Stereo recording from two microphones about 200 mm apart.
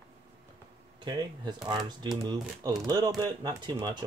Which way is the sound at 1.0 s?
20° right (ahead or behind).